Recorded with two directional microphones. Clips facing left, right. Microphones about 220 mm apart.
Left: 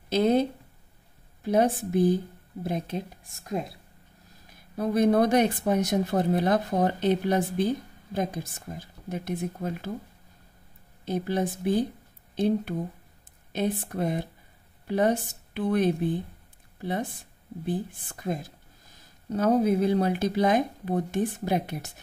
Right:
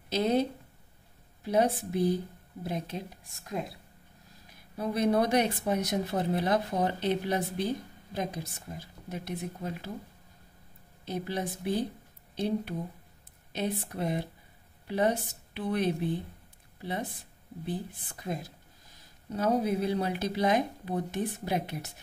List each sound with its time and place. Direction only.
0.1 s speech: 50° left (ahead or behind)
4.7 s speech: 45° left (ahead or behind)
11.1 s speech: 50° left (ahead or behind)
18.2 s speech: 50° left (ahead or behind)